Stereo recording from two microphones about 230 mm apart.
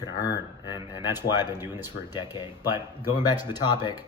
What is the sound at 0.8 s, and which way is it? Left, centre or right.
Speech, centre.